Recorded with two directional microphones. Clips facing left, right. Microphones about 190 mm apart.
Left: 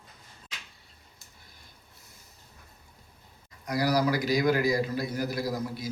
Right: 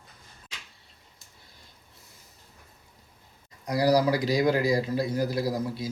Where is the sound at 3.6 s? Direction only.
30° right (ahead or behind).